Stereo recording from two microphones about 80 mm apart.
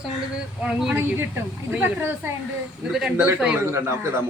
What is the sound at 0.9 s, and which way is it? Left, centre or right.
A woman's voice, right.